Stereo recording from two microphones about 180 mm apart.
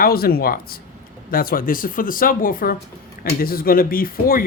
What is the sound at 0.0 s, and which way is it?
Speech, 55° left (ahead or behind).